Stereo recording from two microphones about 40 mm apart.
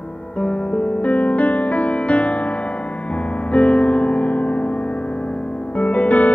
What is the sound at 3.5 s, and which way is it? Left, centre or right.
Music, left.